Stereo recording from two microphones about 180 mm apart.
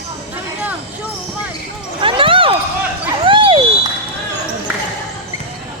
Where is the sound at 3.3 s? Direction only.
30° right (ahead or behind).